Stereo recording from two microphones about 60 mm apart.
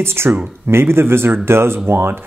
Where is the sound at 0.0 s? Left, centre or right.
Right.